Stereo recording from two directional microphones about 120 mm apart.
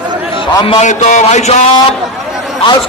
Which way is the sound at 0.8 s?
85° left.